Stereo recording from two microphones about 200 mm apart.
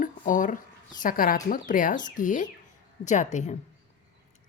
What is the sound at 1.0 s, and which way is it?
Speech, 45° left (ahead or behind).